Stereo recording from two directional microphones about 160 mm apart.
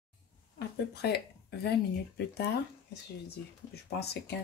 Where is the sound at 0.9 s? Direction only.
90° left.